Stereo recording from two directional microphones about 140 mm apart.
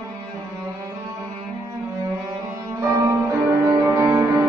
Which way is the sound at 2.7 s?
20° right (ahead or behind).